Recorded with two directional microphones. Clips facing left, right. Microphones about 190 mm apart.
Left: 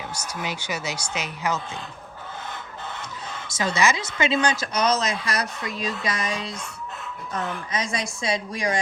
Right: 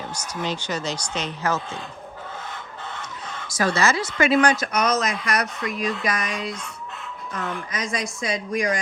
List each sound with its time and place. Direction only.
0.1 s speech: 10° left (ahead or behind)
3.4 s a sound: 25° left (ahead or behind)
3.8 s speech: 15° left (ahead or behind)
7.7 s speech: 30° left (ahead or behind)